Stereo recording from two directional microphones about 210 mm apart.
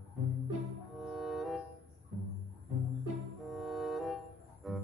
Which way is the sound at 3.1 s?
Centre (ahead or behind).